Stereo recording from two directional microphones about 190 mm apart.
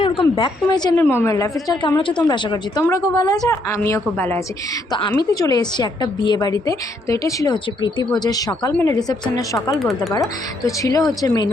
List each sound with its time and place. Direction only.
0.0 s a woman's voice: 30° left (ahead or behind); by 4.4 s 10° left (ahead or behind)
4.9 s a woman's voice: 25° left (ahead or behind)
9.7 s speech: centre (ahead or behind)
10.1 s a woman's voice: 15° left (ahead or behind)